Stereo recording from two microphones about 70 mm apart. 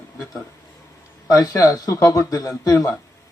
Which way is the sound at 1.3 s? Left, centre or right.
Left.